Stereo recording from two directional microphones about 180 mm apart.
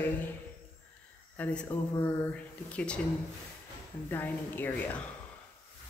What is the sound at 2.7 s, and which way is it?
Speech, 5° left (ahead or behind).